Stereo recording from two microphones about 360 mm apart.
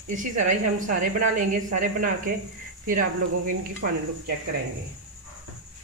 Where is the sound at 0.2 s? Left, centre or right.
Right.